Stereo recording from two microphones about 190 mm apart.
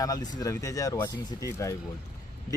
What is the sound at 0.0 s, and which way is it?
A man's voice, 20° left (ahead or behind).